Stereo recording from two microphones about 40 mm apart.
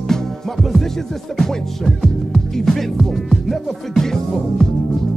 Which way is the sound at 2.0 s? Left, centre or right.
Centre.